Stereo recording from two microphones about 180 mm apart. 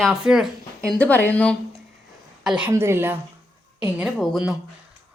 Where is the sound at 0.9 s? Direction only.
10° left (ahead or behind).